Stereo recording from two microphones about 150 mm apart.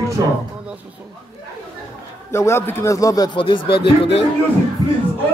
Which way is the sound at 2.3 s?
20° left (ahead or behind).